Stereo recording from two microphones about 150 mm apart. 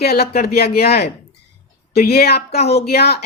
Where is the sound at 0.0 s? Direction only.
90° left.